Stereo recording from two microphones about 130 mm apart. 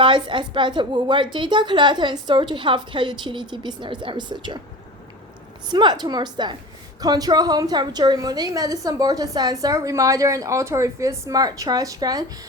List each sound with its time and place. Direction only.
0.0 s a woman's voice: 40° right (ahead or behind)
5.6 s a woman's voice: 35° right (ahead or behind)